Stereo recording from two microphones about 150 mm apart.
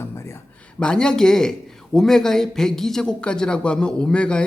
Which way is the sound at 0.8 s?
5° left (ahead or behind).